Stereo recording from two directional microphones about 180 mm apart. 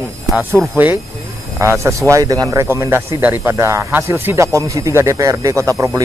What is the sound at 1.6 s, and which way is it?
A woman's voice, 15° right (ahead or behind).